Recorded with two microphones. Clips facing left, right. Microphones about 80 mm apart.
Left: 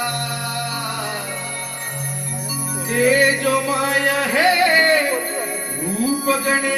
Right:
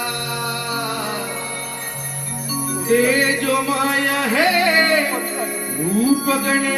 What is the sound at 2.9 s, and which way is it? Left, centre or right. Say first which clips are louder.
Speech: right 1 dB; left.